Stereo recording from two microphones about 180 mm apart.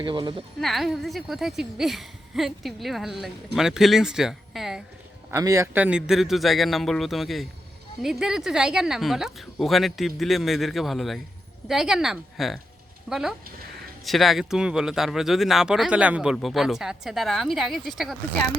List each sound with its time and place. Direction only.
0.0 s speech: 25° right (ahead or behind)
0.6 s a woman's voice: centre (ahead or behind)
5.3 s a woman's voice: 20° right (ahead or behind); by 18.2 s centre (ahead or behind)